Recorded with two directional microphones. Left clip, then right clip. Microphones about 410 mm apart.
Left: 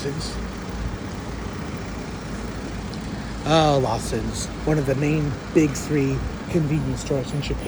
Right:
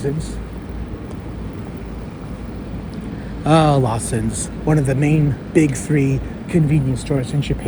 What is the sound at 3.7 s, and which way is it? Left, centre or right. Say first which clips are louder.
A man's voice: right 2 dB; right.